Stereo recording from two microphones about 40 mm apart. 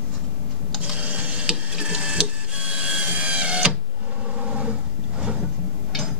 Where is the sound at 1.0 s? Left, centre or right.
Right.